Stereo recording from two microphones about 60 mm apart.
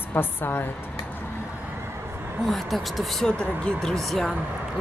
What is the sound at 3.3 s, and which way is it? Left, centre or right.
Speech, centre.